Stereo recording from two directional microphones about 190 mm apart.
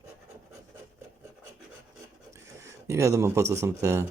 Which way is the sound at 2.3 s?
15° right (ahead or behind).